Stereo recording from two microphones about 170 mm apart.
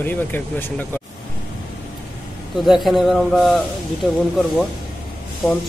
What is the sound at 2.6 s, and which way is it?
Speech, centre (ahead or behind).